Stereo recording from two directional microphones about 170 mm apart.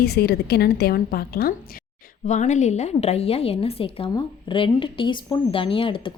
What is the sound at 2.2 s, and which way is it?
Speech, 45° left (ahead or behind).